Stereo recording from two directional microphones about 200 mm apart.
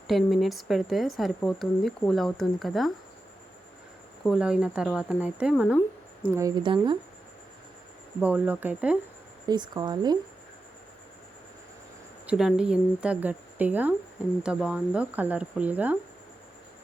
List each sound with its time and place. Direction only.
0.1 s a woman's voice: centre (ahead or behind)
4.2 s a woman's voice: centre (ahead or behind)
6.6 s speech: 25° right (ahead or behind)
8.2 s a woman's voice: 10° right (ahead or behind)
9.5 s speech: 20° right (ahead or behind)
12.2 s a woman's voice: 5° right (ahead or behind)